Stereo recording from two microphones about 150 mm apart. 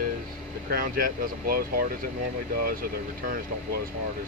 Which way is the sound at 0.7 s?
75° right (ahead or behind).